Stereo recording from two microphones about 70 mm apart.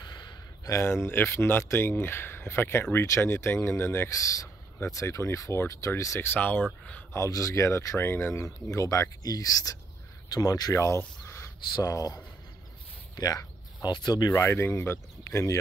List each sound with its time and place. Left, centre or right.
0.1 s a sound: left
0.7 s speech: left
4.1 s speech: left
6.2 s speech: left
7.2 s speech: left
11.2 s a sound: left
11.9 s speech: left
13.8 s speech: left
14.3 s speech: left